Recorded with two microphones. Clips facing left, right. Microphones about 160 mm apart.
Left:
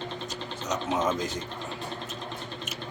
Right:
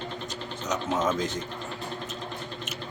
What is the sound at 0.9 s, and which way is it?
Speech, 10° left (ahead or behind).